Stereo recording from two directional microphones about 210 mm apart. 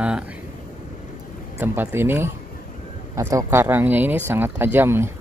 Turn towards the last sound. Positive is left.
turn(degrees=-10)  # may be behind; listen again after turning